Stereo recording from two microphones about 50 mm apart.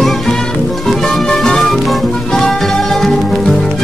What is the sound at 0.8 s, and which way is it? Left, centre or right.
Music, centre.